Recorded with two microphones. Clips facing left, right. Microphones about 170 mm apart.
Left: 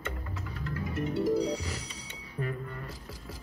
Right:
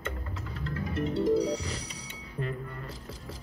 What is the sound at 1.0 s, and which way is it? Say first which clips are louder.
Music: right 2 dB; 30° right (ahead or behind).